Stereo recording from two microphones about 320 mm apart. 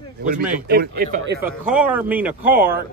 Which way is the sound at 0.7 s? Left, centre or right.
Right.